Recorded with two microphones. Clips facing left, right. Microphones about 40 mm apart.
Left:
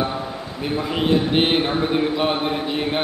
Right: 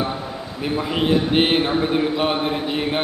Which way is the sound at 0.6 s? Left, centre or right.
Centre.